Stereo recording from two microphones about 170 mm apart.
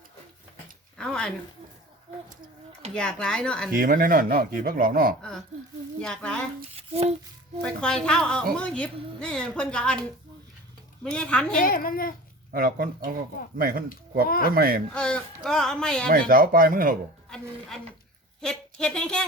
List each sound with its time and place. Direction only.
0.9 s a sound: 5° left (ahead or behind)
2.9 s a woman's voice: 5° left (ahead or behind)
3.7 s speech: 55° right (ahead or behind)
6.0 s a woman's voice: 5° left (ahead or behind)
6.7 s a sound: 35° right (ahead or behind)
7.6 s a woman's voice: 5° left (ahead or behind)
11.0 s a woman's voice: 5° left (ahead or behind)
11.6 s speech: 55° left (ahead or behind)
12.5 s speech: 55° right (ahead or behind)
14.9 s a woman's voice: 5° left (ahead or behind)
16.0 s speech: 55° right (ahead or behind)
17.2 s a woman's voice: 5° left (ahead or behind)